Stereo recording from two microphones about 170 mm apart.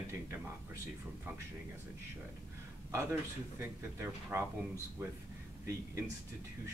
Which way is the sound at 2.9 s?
15° right (ahead or behind).